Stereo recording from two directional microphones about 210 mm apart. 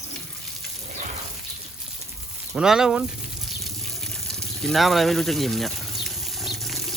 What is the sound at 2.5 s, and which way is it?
Speech, centre (ahead or behind).